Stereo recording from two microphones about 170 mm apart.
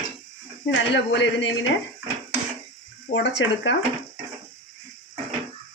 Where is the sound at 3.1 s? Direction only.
90° left.